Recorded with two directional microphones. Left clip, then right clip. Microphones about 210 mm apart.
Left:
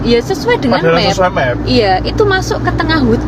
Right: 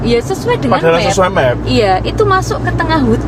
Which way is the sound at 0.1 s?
Centre (ahead or behind).